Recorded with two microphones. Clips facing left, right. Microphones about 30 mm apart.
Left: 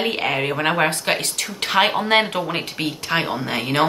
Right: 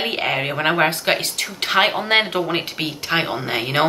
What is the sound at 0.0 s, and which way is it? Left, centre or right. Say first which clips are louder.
Speech: even; centre.